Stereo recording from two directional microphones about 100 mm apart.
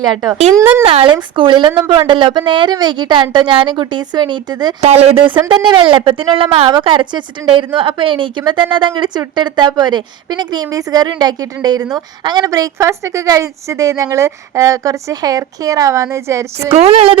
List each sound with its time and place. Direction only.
0.0 s speech: centre (ahead or behind)
0.6 s speech: 20° right (ahead or behind)
0.9 s a woman's voice: 65° right (ahead or behind); by 4.7 s 50° right (ahead or behind)
4.8 s speech: 90° right; by 6.7 s 65° right (ahead or behind)
6.7 s a woman's voice: 55° right (ahead or behind); by 16.7 s 30° right (ahead or behind)
16.7 s a sound: 80° right